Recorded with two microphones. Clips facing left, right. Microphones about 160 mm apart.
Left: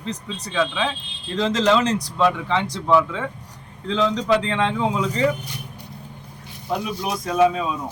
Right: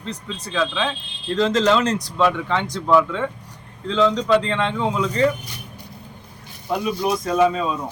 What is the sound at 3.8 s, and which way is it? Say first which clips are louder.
Speech: right 2 dB; 15° left (ahead or behind).